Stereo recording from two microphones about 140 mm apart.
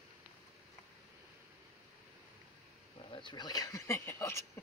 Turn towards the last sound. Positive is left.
turn(degrees=20)  # may be behind; listen again after turning